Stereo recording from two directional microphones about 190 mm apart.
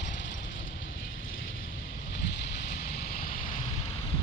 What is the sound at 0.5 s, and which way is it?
Vehicle, 85° left.